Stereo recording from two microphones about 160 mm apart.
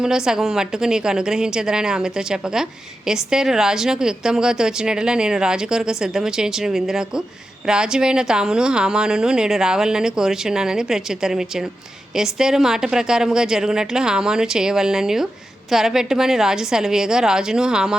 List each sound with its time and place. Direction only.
0.0 s speech: 5° right (ahead or behind)